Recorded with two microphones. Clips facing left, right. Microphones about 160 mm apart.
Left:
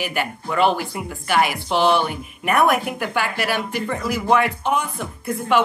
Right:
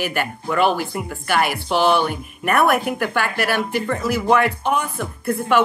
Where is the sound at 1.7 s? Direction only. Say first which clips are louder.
Right 3 dB; 15° left (ahead or behind).